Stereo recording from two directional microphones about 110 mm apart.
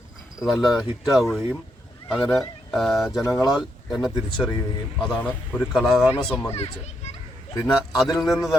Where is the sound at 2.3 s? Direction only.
Centre (ahead or behind).